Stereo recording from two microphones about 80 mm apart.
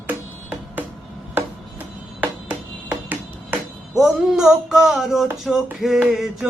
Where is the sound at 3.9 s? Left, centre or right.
Centre.